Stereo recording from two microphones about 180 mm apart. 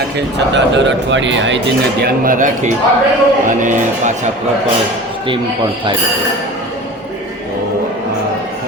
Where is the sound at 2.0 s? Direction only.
50° right (ahead or behind).